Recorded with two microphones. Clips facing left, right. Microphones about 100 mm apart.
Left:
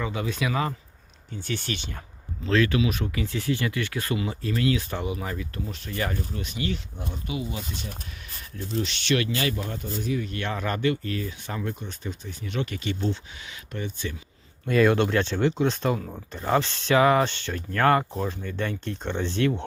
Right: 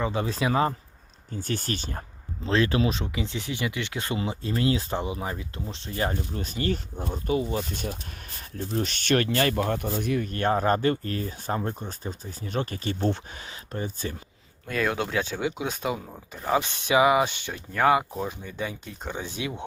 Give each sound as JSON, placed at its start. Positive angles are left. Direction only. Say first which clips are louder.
{"t": 0.0, "sound": "speech", "louder": "right 2 dB", "side_deg": -30}
{"t": 2.9, "sound": "speech", "louder": "left 1 dB", "side_deg": -20}
{"t": 6.1, "sound": "speech", "louder": "right 1 dB", "side_deg": -40}
{"t": 14.7, "sound": "speech", "louder": "left 6 dB", "side_deg": 0}